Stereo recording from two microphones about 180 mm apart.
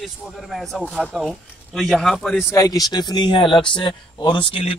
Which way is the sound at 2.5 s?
20° left (ahead or behind).